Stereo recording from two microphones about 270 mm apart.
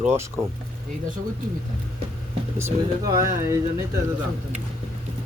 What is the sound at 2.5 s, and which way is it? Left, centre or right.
Speech, centre.